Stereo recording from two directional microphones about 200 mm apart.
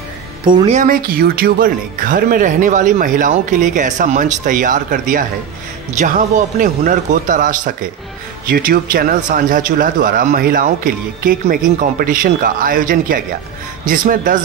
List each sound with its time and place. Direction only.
0.7 s speech: 40° right (ahead or behind)